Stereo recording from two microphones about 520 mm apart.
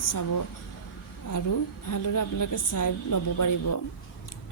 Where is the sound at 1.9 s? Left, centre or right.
Left.